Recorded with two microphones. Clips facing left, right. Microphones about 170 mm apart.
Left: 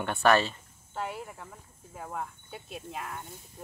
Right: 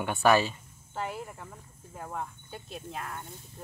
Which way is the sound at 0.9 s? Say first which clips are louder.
Even; centre (ahead or behind).